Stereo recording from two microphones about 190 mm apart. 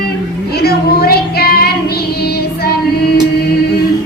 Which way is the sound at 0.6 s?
55° left (ahead or behind).